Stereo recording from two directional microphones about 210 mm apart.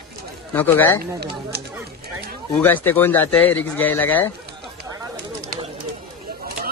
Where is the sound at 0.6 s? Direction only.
10° left (ahead or behind).